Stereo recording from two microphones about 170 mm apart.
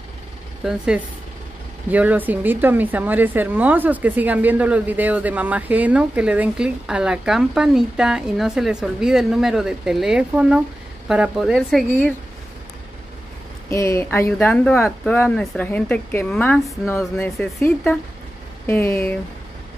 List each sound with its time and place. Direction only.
0.7 s a woman's voice: 5° right (ahead or behind)
13.7 s speech: 15° left (ahead or behind)
15.2 s speech: 5° left (ahead or behind)